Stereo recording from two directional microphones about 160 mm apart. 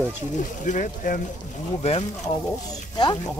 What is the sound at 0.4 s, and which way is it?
Speech, 55° left (ahead or behind).